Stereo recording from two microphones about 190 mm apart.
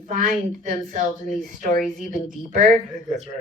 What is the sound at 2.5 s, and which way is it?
Speech, 45° right (ahead or behind).